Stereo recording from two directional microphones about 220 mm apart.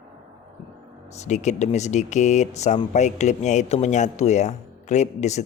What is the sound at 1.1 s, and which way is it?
Speech, 30° left (ahead or behind).